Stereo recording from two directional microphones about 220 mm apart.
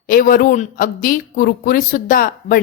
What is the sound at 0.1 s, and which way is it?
A man's voice, 40° left (ahead or behind).